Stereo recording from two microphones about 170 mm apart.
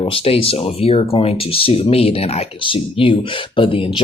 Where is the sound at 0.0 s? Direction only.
30° left (ahead or behind).